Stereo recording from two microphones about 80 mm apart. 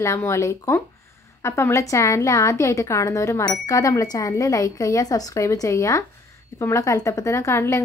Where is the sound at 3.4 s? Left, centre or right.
Left.